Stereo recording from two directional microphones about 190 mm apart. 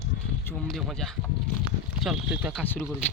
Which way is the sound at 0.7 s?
Centre (ahead or behind).